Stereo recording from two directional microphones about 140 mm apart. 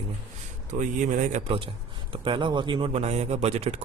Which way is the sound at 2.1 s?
35° right (ahead or behind).